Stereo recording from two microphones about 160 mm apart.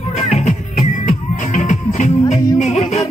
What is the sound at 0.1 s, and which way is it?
Music, 45° left (ahead or behind).